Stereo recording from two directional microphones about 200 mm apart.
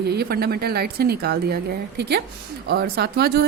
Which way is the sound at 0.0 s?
55° right (ahead or behind).